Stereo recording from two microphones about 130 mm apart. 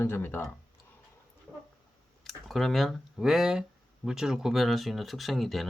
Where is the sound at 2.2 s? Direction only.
Centre (ahead or behind).